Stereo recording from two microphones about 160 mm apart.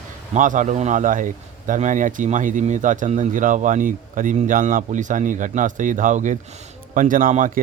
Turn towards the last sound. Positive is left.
turn(degrees=-55)  # may be behind; listen again after turning